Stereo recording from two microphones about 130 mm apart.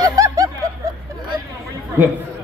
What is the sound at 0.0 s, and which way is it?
Snicker, 25° right (ahead or behind).